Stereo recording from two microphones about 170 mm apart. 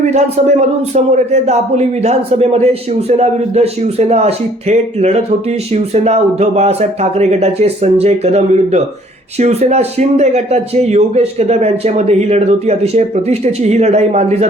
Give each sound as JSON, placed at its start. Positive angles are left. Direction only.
{"t": 0.0, "sound": "speech", "side_deg": -40}